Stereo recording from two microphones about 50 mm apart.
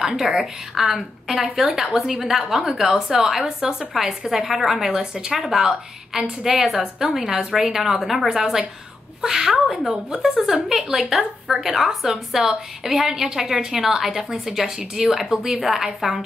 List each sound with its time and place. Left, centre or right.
0.1 s a woman's voice: centre
15.2 s a woman's voice: centre